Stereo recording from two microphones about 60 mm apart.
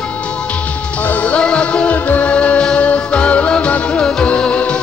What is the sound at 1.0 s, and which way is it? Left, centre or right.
Music, left.